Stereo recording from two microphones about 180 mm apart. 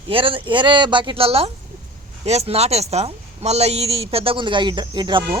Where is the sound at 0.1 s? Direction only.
30° right (ahead or behind).